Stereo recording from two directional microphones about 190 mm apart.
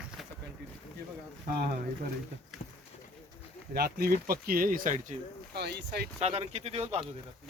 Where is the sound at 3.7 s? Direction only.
55° right (ahead or behind).